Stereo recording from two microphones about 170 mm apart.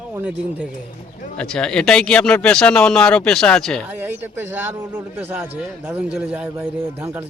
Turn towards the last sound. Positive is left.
turn(degrees=-10)  # may be behind; listen again after turning